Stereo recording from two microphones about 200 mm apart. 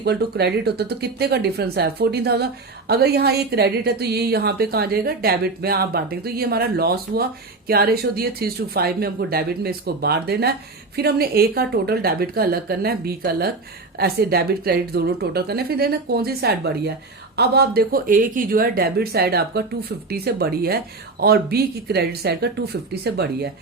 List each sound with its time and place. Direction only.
0.0 s speech: 55° right (ahead or behind)